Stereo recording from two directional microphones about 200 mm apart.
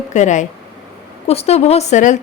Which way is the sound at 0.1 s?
35° left (ahead or behind).